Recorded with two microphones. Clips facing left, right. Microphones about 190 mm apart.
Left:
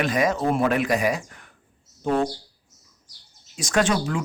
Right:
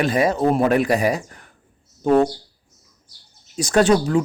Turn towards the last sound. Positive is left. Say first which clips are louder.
# right 6 dB
turn(degrees=-40)  # may be behind; listen again after turning